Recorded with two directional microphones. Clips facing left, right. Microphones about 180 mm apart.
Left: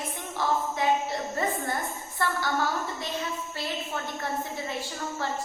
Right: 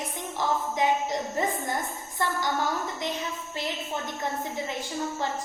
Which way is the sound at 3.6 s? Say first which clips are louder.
Right 3 dB; 15° right (ahead or behind).